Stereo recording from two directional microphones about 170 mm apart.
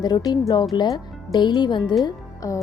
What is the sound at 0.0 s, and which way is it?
Speech, 25° left (ahead or behind).